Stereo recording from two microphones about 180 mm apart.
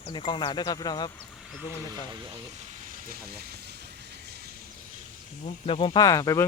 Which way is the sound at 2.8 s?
50° right (ahead or behind).